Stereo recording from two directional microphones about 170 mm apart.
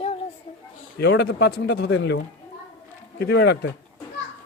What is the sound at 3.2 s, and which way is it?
Speech, 75° left (ahead or behind).